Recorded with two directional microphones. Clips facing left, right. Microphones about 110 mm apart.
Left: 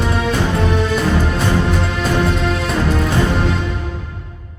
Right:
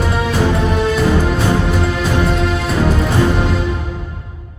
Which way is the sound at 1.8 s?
Centre (ahead or behind).